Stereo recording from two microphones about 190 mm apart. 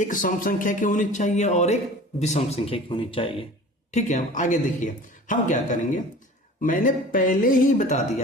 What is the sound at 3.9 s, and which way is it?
Speech, 40° left (ahead or behind).